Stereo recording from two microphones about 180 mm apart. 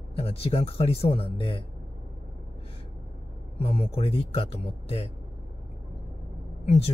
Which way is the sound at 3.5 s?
30° left (ahead or behind).